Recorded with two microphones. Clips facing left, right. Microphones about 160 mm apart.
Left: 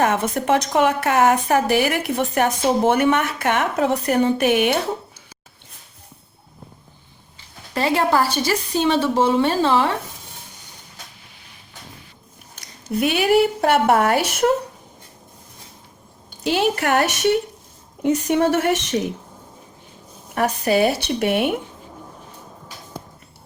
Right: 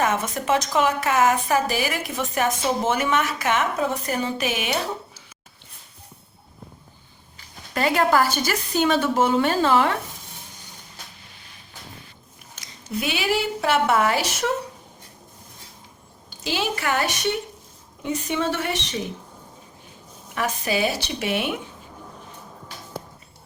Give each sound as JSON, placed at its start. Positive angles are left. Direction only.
{"t": 0.0, "sound": "a woman's voice", "side_deg": 65}
{"t": 7.3, "sound": "a woman's voice", "side_deg": 25}
{"t": 13.0, "sound": "a woman's voice", "side_deg": 60}
{"t": 13.8, "sound": "a woman's voice", "side_deg": 40}
{"t": 16.4, "sound": "a woman's voice", "side_deg": 60}
{"t": 20.7, "sound": "a woman's voice", "side_deg": 55}